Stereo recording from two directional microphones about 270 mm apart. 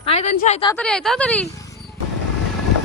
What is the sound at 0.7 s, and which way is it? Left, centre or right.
Speech, centre.